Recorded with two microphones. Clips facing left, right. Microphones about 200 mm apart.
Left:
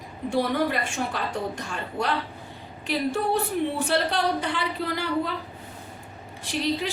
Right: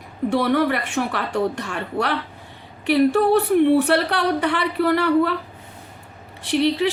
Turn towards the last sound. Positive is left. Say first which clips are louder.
# right 7 dB
turn(degrees=-65)  # may be behind; listen again after turning